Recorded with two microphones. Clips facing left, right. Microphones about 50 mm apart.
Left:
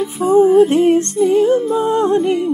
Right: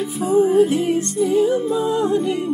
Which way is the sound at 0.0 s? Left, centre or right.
Centre.